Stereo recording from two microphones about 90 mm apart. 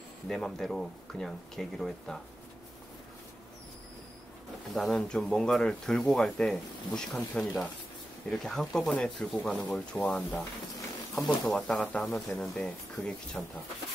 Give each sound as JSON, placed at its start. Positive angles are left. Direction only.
{"t": 0.3, "sound": "speech", "side_deg": 5}
{"t": 4.7, "sound": "speech", "side_deg": 5}
{"t": 10.0, "sound": "speech", "side_deg": 15}